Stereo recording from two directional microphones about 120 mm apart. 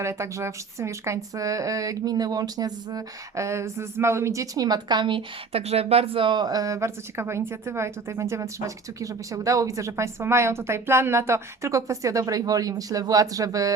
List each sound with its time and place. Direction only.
0.0 s speech: 25° right (ahead or behind)